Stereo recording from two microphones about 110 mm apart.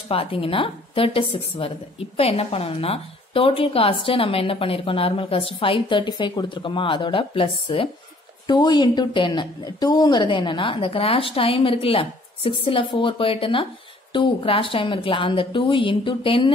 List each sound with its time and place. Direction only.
0.1 s a woman's voice: 55° left (ahead or behind)
8.5 s a woman's voice: 40° left (ahead or behind)